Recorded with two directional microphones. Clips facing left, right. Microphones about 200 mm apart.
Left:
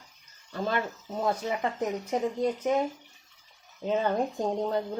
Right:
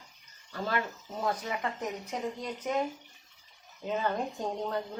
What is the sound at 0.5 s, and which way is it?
Speech, 20° left (ahead or behind).